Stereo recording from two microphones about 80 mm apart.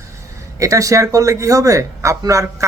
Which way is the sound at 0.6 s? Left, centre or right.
Right.